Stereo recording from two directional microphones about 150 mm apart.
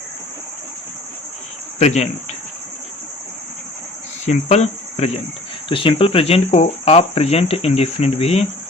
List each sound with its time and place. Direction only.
1.8 s speech: 50° left (ahead or behind)
4.3 s speech: 45° left (ahead or behind)
5.6 s speech: 35° left (ahead or behind)